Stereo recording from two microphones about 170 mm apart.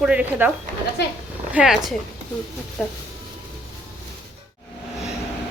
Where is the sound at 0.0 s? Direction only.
10° right (ahead or behind).